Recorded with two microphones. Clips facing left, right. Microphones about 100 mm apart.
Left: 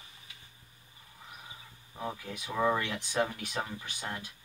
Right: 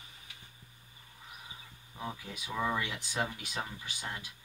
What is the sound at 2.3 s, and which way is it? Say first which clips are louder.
Speech: left 5 dB; 40° left (ahead or behind).